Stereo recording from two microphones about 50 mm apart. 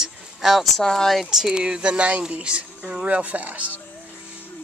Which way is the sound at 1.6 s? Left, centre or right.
Centre.